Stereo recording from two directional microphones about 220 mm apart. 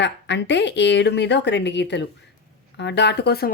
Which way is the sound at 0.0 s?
55° left (ahead or behind).